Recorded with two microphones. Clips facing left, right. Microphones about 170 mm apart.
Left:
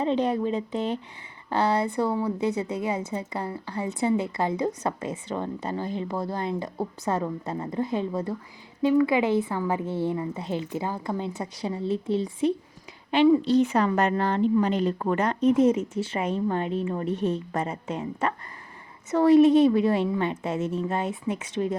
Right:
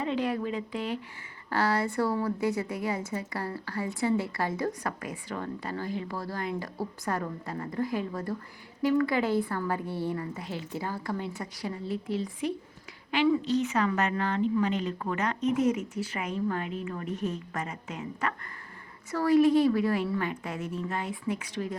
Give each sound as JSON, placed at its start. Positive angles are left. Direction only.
{"t": 0.0, "sound": "a woman's voice", "side_deg": 25}